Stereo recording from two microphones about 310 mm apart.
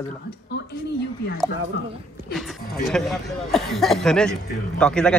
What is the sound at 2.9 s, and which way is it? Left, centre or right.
Speech, centre.